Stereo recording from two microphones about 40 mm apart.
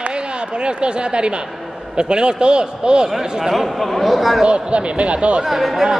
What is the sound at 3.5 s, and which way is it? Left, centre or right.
Speech, centre.